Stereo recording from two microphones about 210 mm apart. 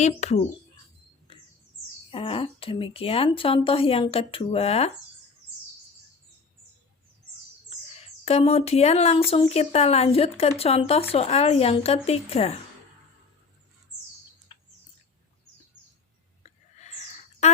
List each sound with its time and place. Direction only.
0.0 s speech: 30° left (ahead or behind)
2.0 s speech: 25° left (ahead or behind)
7.9 s speech: 30° left (ahead or behind)
14.5 s bird: 25° left (ahead or behind)
16.4 s whispering: 35° left (ahead or behind)